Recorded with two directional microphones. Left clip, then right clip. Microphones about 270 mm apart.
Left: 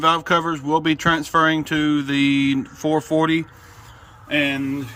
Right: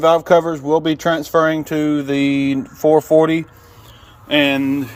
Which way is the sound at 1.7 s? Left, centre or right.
Centre.